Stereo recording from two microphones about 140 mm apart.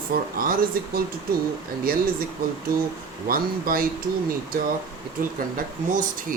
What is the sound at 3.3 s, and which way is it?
Speech, 90° right.